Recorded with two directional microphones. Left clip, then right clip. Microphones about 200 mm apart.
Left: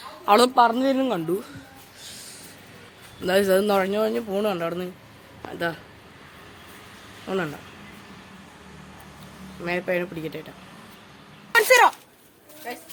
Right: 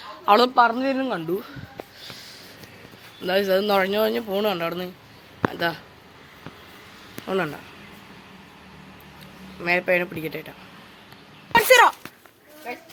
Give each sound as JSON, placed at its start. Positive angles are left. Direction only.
{"t": 0.0, "sound": "speech", "side_deg": 5}
{"t": 3.2, "sound": "speech", "side_deg": 20}
{"t": 3.8, "sound": "speech", "side_deg": 0}
{"t": 7.3, "sound": "speech", "side_deg": -5}
{"t": 9.6, "sound": "speech", "side_deg": -5}
{"t": 11.5, "sound": "a sound", "side_deg": 0}